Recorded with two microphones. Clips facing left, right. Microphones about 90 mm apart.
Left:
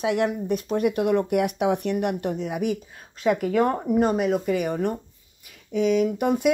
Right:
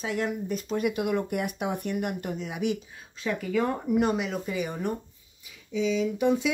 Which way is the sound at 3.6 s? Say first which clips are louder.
Left 4 dB; 45° left (ahead or behind).